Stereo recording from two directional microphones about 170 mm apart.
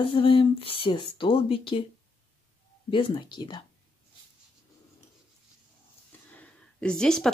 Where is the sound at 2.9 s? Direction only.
30° left (ahead or behind).